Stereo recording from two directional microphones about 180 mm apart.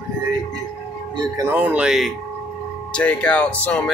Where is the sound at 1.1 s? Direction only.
20° right (ahead or behind).